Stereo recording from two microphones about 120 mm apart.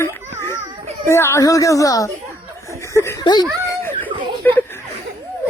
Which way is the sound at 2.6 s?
25° left (ahead or behind).